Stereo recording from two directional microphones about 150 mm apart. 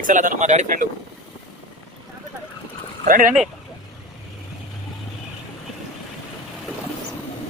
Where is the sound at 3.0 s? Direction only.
65° right (ahead or behind).